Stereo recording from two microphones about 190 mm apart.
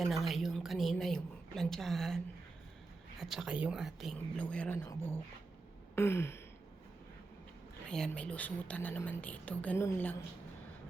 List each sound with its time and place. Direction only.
0.0 s a woman's voice: centre (ahead or behind)
7.9 s a woman's voice: 5° left (ahead or behind)